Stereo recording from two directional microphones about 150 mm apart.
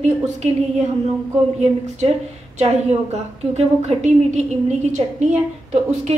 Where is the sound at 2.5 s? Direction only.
45° right (ahead or behind).